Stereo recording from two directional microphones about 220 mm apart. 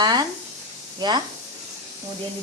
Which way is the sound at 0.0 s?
20° right (ahead or behind).